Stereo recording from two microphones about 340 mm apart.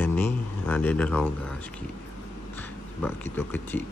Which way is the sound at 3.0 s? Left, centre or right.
Centre.